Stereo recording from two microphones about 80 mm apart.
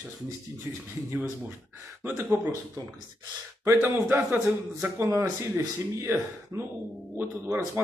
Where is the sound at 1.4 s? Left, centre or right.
Right.